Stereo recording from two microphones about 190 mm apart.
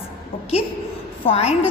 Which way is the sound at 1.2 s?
30° left (ahead or behind).